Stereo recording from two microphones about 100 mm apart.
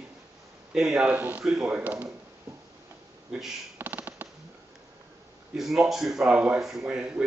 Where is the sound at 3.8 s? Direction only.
20° right (ahead or behind).